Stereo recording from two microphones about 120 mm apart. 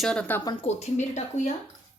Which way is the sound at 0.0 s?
10° left (ahead or behind).